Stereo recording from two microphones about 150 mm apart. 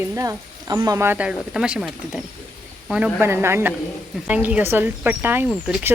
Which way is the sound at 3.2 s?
15° right (ahead or behind).